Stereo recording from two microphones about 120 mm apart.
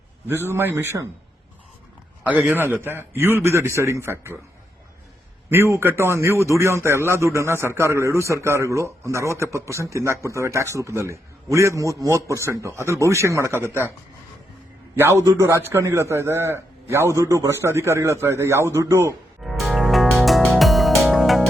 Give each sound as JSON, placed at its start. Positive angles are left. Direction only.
{"t": 0.3, "sound": "a man's voice", "side_deg": -20}
{"t": 2.2, "sound": "a man's voice", "side_deg": -10}
{"t": 5.5, "sound": "a man's voice", "side_deg": -20}
{"t": 14.9, "sound": "a man's voice", "side_deg": -20}
{"t": 19.4, "sound": "music", "side_deg": 0}